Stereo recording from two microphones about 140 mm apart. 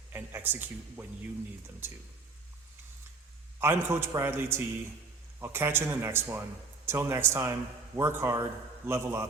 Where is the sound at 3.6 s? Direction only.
15° right (ahead or behind).